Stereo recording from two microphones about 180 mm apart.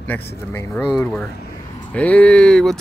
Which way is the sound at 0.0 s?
10° left (ahead or behind).